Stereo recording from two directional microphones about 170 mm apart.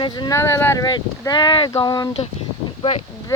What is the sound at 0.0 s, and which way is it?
Speech, 20° left (ahead or behind).